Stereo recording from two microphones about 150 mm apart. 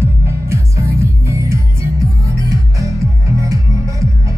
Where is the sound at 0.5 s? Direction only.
20° right (ahead or behind).